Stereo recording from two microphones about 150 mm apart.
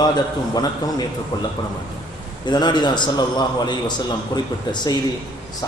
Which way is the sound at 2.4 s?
30° left (ahead or behind).